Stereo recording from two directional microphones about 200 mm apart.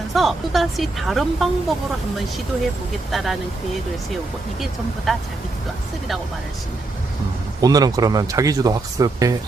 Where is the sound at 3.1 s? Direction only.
Centre (ahead or behind).